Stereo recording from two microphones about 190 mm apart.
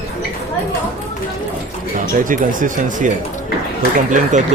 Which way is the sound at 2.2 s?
45° right (ahead or behind).